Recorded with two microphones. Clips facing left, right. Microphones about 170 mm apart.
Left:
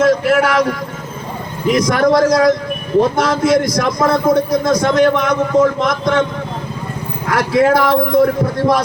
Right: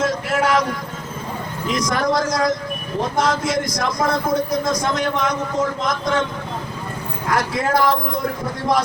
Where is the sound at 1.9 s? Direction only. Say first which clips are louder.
Left 8 dB; 60° left (ahead or behind).